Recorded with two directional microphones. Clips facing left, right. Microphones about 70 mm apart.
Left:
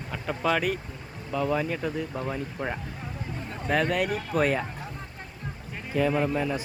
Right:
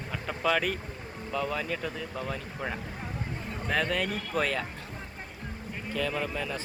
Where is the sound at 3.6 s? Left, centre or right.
Centre.